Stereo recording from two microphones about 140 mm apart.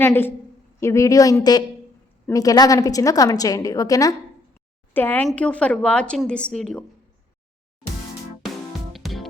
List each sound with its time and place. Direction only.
0.0 s a woman's voice: 15° left (ahead or behind)
4.9 s a woman's voice: 15° left (ahead or behind)
8.9 s music: centre (ahead or behind)